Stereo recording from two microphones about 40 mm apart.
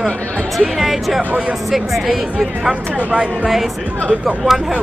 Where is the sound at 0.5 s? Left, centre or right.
Centre.